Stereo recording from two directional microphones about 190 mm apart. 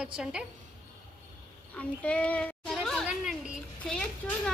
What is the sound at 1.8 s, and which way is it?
A child's voice, 5° left (ahead or behind).